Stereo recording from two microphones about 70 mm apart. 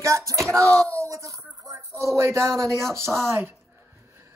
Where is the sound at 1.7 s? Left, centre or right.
Right.